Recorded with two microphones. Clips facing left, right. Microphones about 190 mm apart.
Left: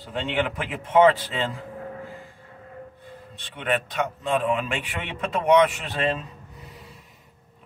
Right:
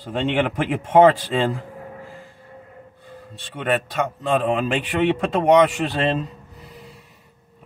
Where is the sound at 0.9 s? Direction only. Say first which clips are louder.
Right 3 dB; 45° right (ahead or behind).